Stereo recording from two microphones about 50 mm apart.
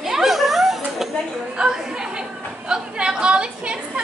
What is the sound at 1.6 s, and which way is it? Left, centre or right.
A woman's voice, centre.